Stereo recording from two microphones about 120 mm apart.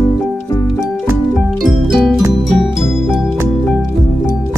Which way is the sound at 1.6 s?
Centre (ahead or behind).